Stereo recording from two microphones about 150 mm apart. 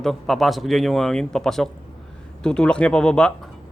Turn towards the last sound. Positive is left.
turn(degrees=5)  # may be behind; listen again after turning